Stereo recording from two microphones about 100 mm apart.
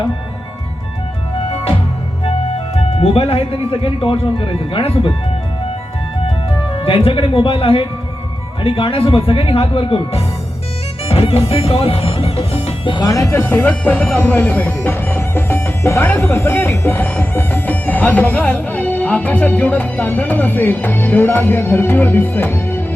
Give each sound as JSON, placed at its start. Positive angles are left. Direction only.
{"t": 3.0, "sound": "speech", "side_deg": 85}
{"t": 3.7, "sound": "speech", "side_deg": 65}
{"t": 6.8, "sound": "speech", "side_deg": 65}
{"t": 13.1, "sound": "speech", "side_deg": 30}